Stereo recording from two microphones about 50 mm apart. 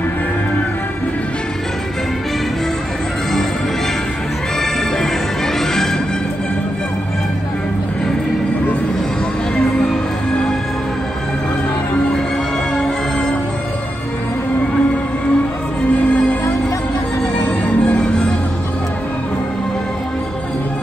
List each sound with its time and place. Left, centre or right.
17.5 s music: left